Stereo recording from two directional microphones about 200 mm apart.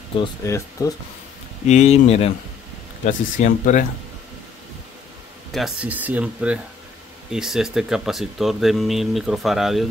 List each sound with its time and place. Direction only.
0.2 s speech: 15° left (ahead or behind)
1.7 s speech: 35° left (ahead or behind)
5.5 s speech: 5° right (ahead or behind)